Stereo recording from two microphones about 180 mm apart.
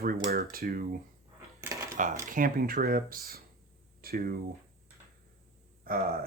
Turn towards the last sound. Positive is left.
turn(degrees=-55)  # may be behind; listen again after turning